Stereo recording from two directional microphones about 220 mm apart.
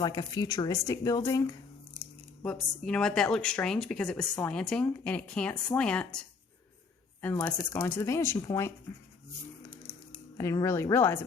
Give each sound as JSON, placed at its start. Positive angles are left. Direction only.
{"t": 0.0, "sound": "speech", "side_deg": 20}
{"t": 2.4, "sound": "speech", "side_deg": 5}
{"t": 10.3, "sound": "speech", "side_deg": 15}